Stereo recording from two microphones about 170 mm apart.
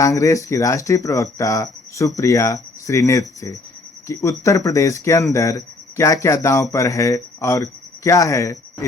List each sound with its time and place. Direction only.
0.0 s speech: 20° left (ahead or behind)